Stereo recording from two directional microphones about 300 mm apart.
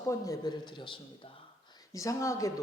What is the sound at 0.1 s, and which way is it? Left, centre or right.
Speech, centre.